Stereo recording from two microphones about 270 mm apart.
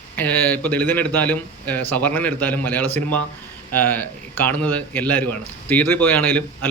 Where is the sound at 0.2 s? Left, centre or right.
Centre.